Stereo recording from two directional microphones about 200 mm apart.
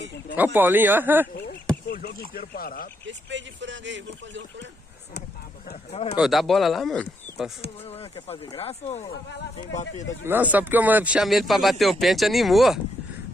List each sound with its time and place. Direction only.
0.4 s speech: 10° right (ahead or behind)
1.9 s speech: 50° left (ahead or behind)
3.1 s speech: 65° right (ahead or behind)
5.9 s speech: 30° left (ahead or behind)
6.1 s speech: centre (ahead or behind)
7.8 s speech: 30° left (ahead or behind)
10.2 s speech: 10° right (ahead or behind)